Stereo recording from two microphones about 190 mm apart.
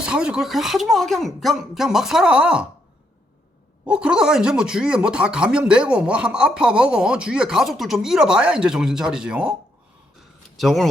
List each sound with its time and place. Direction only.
0.0 s speech: 5° right (ahead or behind)
3.8 s speech: 5° right (ahead or behind)
10.6 s speech: centre (ahead or behind)